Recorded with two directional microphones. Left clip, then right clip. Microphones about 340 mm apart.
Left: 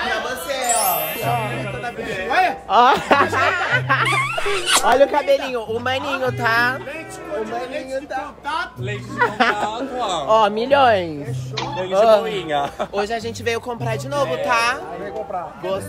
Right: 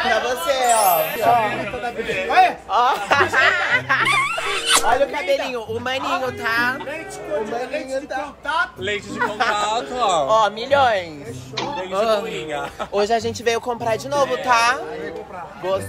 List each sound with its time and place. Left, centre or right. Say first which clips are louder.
0.5 s music: right 4 dB; centre
2.2 s a sound: right 3 dB; centre
2.7 s speech: left 3 dB; left
4.1 s a woman's voice: right 1 dB; centre
7.9 s speech: even; centre
9.2 s speech: left 3 dB; left
9.9 s speech: right 5 dB; right
10.2 s speech: left 1 dB; left
11.5 s a woman's voice: left 4 dB; centre
12.4 s speech: left 5 dB; left
12.9 s speech: right 4 dB; centre